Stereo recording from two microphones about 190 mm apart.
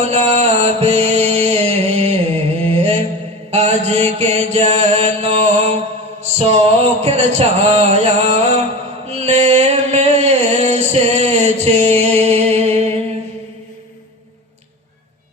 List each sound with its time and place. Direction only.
0.0 s music: 35° right (ahead or behind)
3.5 s mantra: 35° right (ahead or behind)
9.0 s a sound: 35° right (ahead or behind)